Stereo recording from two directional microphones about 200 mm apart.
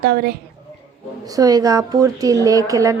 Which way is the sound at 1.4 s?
20° right (ahead or behind).